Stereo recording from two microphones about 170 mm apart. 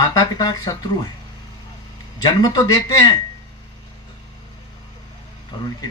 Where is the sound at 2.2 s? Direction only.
25° left (ahead or behind).